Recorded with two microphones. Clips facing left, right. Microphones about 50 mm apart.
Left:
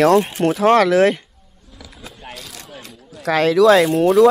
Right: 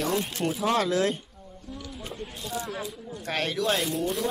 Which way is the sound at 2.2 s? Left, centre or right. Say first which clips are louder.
Right 3 dB; left.